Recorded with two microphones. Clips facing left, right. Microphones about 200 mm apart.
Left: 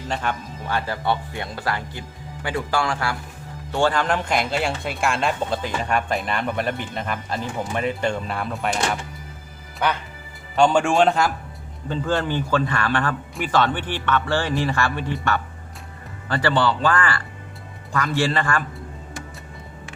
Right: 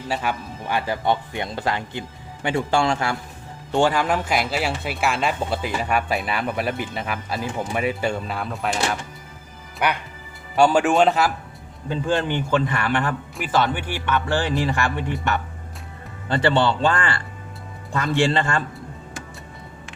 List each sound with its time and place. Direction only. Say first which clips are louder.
0.1 s speech: right 1 dB; 5° right (ahead or behind)
10.5 s speech: right 1 dB; 5° right (ahead or behind)
11.9 s speech: right 1 dB; 15° right (ahead or behind)
13.3 s speech: left 1 dB; 5° right (ahead or behind); by 18.6 s 25° right (ahead or behind)